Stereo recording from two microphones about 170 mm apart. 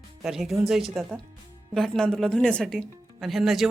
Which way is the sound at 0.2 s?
Centre (ahead or behind).